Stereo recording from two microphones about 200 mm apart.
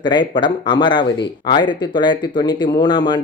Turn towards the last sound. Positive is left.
turn(degrees=20)  # may be behind; listen again after turning